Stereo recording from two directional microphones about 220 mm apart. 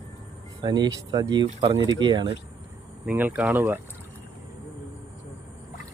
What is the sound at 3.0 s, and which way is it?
Speech, 10° right (ahead or behind).